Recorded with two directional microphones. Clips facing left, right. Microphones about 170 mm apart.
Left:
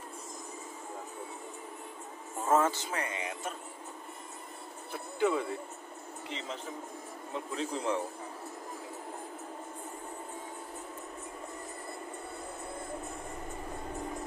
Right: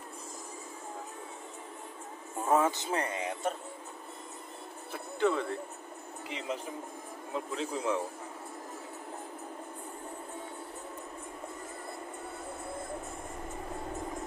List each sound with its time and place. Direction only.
2.5 s speech: 20° right (ahead or behind)
2.9 s speech: 35° right (ahead or behind)
5.2 s speech: 5° left (ahead or behind)
7.3 s speech: 5° right (ahead or behind)